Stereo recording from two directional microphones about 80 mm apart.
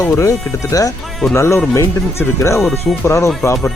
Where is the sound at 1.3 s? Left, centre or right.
Left.